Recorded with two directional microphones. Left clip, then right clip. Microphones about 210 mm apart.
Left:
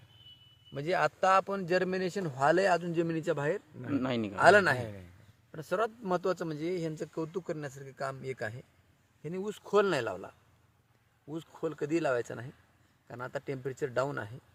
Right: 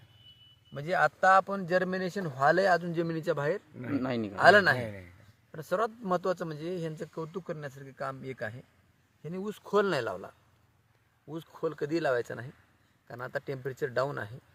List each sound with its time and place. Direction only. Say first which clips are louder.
0.7 s a man's voice: right 2 dB; 30° left (ahead or behind); by 4.4 s centre (ahead or behind)
4.4 s a man's voice: right 2 dB; 15° left (ahead or behind); by 8.5 s 40° left (ahead or behind)
9.2 s a man's voice: left 1 dB; 20° left (ahead or behind); by 14.3 s centre (ahead or behind)